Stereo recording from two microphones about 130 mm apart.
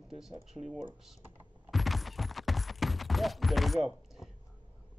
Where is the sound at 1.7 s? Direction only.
Centre (ahead or behind).